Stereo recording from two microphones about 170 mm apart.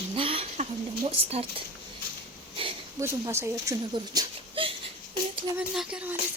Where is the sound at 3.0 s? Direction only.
15° right (ahead or behind).